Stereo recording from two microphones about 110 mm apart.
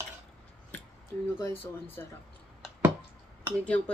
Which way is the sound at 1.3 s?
25° left (ahead or behind).